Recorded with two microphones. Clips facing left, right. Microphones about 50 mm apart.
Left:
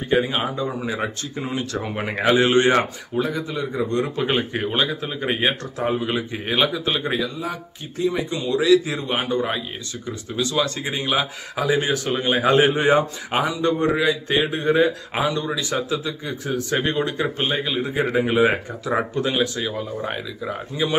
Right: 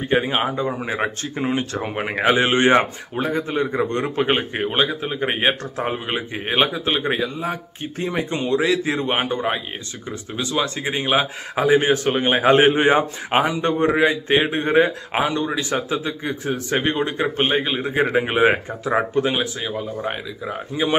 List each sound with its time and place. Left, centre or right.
0.1 s a man's voice: right
1.8 s a man's voice: centre
3.2 s a man's voice: right
16.7 s a man's voice: right
19.4 s speech: centre
20.7 s a man's voice: right